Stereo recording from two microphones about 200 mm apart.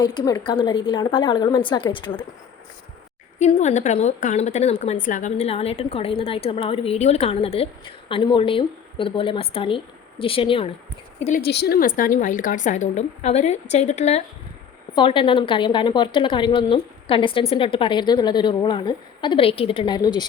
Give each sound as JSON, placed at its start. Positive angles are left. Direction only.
{"t": 0.0, "sound": "a woman's voice", "side_deg": 20}
{"t": 3.3, "sound": "a woman's voice", "side_deg": 35}
{"t": 11.3, "sound": "a woman's voice", "side_deg": 55}